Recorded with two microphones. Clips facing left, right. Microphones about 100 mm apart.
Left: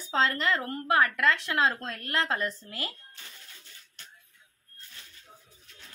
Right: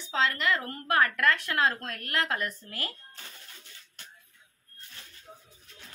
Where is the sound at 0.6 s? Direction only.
20° left (ahead or behind).